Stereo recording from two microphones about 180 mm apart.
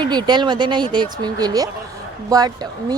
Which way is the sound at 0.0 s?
25° right (ahead or behind).